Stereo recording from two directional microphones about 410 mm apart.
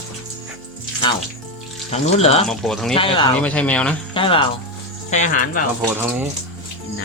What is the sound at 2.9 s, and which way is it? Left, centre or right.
Speech, centre.